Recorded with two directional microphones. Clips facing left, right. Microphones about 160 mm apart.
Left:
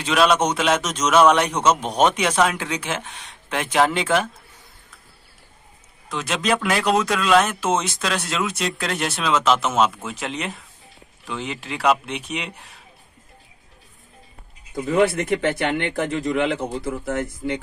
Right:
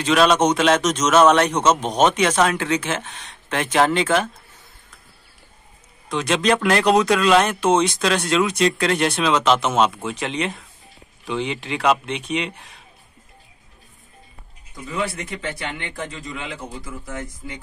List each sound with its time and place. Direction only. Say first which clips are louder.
0.0 s a man's voice: right 2 dB; 5° left (ahead or behind)
6.0 s speech: right 4 dB; 5° left (ahead or behind)
14.9 s a man's voice: left 8 dB; 55° left (ahead or behind)